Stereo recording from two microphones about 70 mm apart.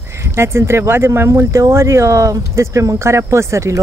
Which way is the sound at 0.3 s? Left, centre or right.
Right.